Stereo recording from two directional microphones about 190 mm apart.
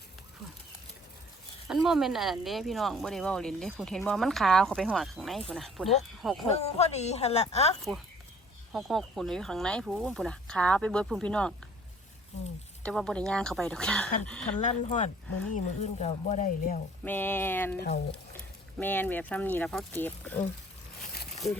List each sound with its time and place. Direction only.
1.6 s speech: centre (ahead or behind)
6.5 s speech: 35° left (ahead or behind)
8.7 s speech: centre (ahead or behind)
12.8 s speech: centre (ahead or behind)
14.6 s speech: 35° left (ahead or behind)
17.0 s speech: 10° left (ahead or behind)
17.7 s speech: 55° left (ahead or behind)
18.8 s speech: 10° left (ahead or behind)